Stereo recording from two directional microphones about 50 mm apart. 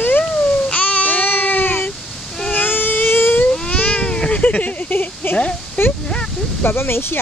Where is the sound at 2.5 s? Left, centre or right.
Left.